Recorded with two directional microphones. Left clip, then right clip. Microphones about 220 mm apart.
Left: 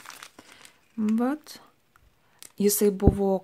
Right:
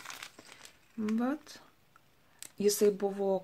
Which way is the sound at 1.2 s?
40° left (ahead or behind).